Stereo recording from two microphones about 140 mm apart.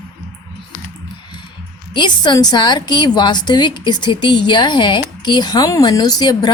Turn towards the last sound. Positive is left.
turn(degrees=30)  # may be behind; listen again after turning